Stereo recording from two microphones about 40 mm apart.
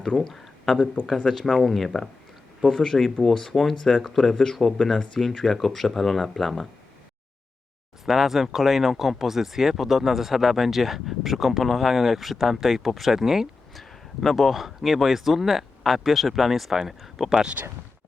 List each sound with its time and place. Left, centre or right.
0.3 s speech: centre
8.0 s speech: centre
14.2 s speech: centre
17.6 s speech: right